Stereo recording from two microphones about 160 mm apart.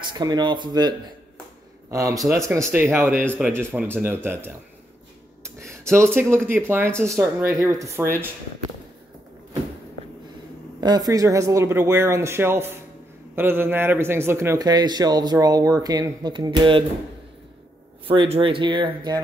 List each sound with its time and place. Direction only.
0.2 s a man's voice: 25° right (ahead or behind)
5.4 s a sound: 15° right (ahead or behind)
6.3 s speech: 15° right (ahead or behind)
10.8 s a man's voice: 25° right (ahead or behind)
18.0 s speech: 35° right (ahead or behind)